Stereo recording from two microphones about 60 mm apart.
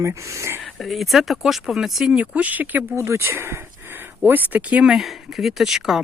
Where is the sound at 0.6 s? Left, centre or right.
Centre.